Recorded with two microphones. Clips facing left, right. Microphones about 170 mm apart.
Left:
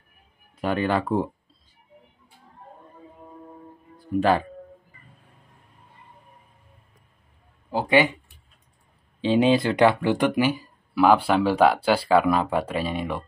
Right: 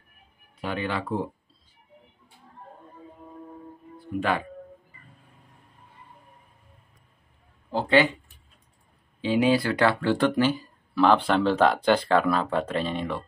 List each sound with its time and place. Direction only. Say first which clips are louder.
0.6 s speech: left 6 dB; 50° left (ahead or behind)
4.2 s speech: left 6 dB; 35° left (ahead or behind)
7.7 s speech: left 1 dB; 10° left (ahead or behind)
9.2 s speech: left 3 dB; 25° left (ahead or behind)